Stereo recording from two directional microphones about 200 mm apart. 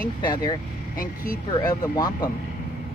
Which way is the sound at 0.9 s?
45° left (ahead or behind).